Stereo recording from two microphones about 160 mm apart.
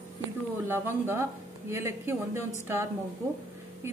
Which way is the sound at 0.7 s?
15° right (ahead or behind).